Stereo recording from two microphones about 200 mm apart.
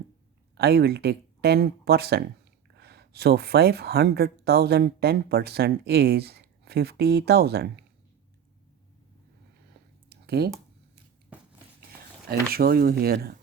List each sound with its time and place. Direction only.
0.5 s speech: 55° right (ahead or behind)
10.1 s a sound: 55° right (ahead or behind)
11.3 s dishes: 10° right (ahead or behind)
12.3 s speech: 50° right (ahead or behind)